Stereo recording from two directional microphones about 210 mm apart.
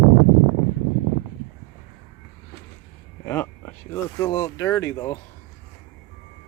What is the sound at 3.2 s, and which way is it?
Speech, 10° left (ahead or behind).